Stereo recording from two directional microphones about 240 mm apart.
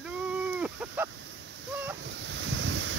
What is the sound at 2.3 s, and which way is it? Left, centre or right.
Waves, right.